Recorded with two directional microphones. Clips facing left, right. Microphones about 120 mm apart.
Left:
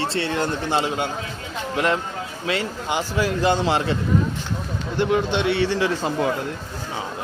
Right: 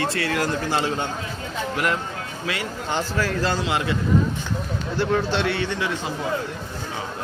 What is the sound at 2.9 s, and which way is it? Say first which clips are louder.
Speech: left 2 dB; 15° left (ahead or behind).